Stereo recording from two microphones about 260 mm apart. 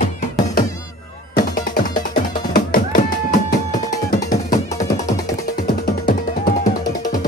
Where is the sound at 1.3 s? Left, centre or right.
Left.